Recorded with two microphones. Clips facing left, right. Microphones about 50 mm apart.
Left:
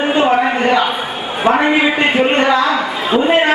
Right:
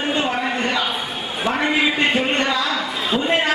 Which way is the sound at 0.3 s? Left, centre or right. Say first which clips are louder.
Left 9 dB; left.